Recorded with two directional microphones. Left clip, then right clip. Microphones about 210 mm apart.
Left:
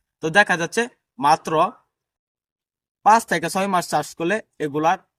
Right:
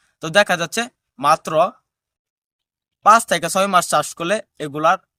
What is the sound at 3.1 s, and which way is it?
Speech, 20° right (ahead or behind).